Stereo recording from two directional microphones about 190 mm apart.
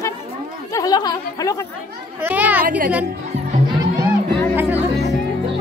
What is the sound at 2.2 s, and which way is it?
Speech, 10° right (ahead or behind).